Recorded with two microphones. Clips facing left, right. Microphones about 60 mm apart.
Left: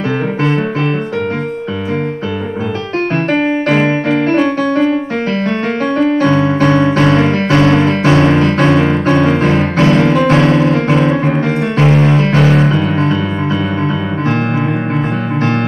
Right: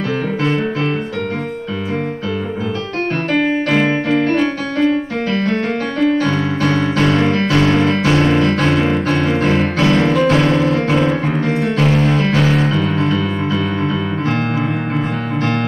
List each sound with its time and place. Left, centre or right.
3.8 s piano: left
4.8 s music: left
6.2 s piano: left
7.2 s music: left
8.0 s piano: left
8.4 s music: left
10.0 s music: left
12.5 s music: left